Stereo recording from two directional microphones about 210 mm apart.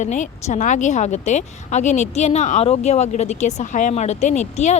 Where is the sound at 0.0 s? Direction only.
35° left (ahead or behind).